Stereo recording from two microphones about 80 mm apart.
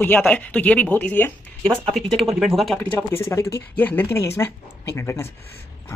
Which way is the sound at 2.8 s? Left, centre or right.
Left.